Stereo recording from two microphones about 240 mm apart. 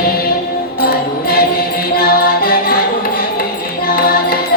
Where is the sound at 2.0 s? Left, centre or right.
Left.